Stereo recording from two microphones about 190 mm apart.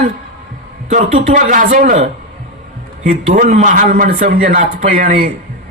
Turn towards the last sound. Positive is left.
turn(degrees=-45)  # may be behind; listen again after turning